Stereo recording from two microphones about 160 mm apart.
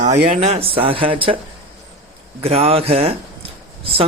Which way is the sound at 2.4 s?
40° right (ahead or behind).